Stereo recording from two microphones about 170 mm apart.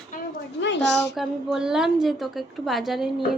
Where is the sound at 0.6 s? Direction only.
90° left.